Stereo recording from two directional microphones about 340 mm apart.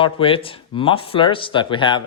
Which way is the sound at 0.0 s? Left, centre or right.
Centre.